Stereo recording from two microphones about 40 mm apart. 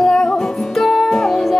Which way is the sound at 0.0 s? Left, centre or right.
Centre.